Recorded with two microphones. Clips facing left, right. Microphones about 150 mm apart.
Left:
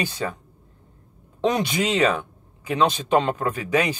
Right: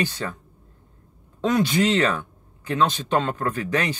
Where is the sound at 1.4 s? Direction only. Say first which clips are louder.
Right 2 dB; 20° left (ahead or behind).